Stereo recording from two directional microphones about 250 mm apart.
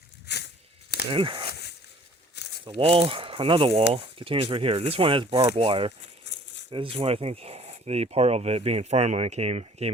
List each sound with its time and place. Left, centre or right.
0.3 s a sound: left
1.1 s speech: centre
1.5 s a sound: left
2.6 s speech: right
6.2 s rattle: left
6.7 s speech: centre